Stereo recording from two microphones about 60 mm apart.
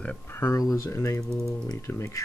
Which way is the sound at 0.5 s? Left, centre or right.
Left.